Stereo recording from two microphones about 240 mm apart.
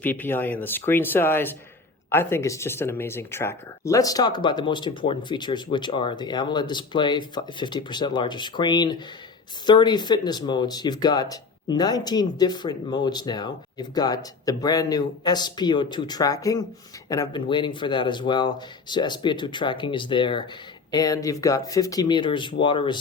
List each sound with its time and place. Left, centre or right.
0.0 s speech: centre